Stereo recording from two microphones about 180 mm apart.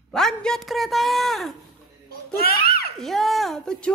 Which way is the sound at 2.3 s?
55° left (ahead or behind).